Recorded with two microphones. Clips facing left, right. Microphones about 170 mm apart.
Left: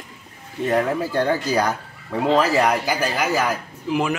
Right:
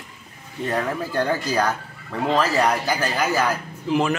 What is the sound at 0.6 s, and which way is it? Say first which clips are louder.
Speech: left 4 dB; 10° left (ahead or behind).